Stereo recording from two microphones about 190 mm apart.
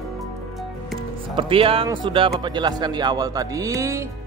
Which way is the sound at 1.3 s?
30° right (ahead or behind).